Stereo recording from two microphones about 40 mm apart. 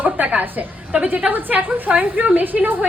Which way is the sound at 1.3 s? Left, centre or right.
Right.